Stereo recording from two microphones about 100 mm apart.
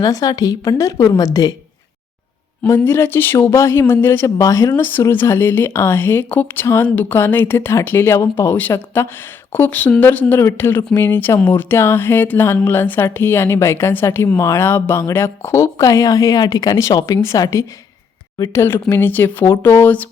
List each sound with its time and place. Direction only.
0.0 s a woman's voice: 40° left (ahead or behind)
2.6 s a woman's voice: 25° left (ahead or behind)
18.5 s speech: 25° left (ahead or behind)